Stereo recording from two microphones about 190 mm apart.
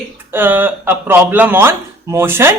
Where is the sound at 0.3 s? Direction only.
10° right (ahead or behind).